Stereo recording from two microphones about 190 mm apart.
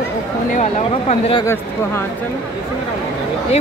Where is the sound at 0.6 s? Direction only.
35° left (ahead or behind).